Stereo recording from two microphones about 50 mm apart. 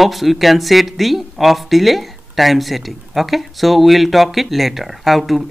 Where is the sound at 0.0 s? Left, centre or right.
Centre.